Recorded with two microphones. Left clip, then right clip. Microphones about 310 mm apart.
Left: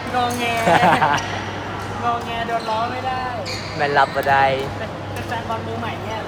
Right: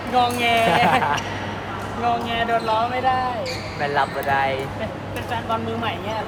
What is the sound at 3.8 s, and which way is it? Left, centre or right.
Speech, left.